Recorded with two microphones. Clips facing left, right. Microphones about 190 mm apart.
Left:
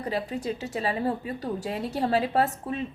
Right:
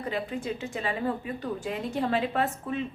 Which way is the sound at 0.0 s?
35° left (ahead or behind).